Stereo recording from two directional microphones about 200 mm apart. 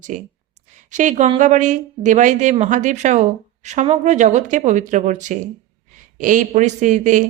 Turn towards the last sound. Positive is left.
turn(degrees=-40)  # may be behind; listen again after turning